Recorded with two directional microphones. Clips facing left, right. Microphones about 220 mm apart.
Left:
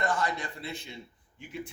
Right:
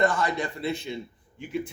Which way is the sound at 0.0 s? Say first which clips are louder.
Right 6 dB; 80° right.